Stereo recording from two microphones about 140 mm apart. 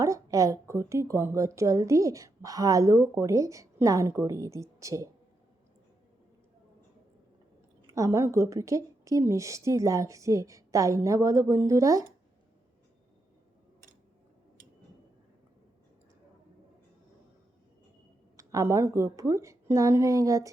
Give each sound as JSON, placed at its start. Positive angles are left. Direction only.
{"t": 0.0, "sound": "speech", "side_deg": -25}
{"t": 7.9, "sound": "speech", "side_deg": -20}
{"t": 18.3, "sound": "speech", "side_deg": -25}